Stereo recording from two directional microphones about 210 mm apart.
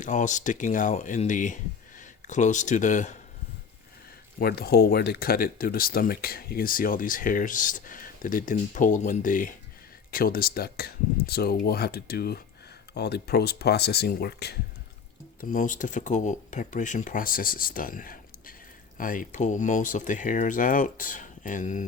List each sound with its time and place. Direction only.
0.0 s speech: 35° left (ahead or behind)
4.4 s speech: 45° left (ahead or behind)
15.4 s speech: 40° left (ahead or behind)